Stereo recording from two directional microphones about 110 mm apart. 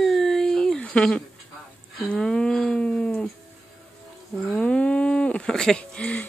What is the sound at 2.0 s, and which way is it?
Speech, 5° left (ahead or behind).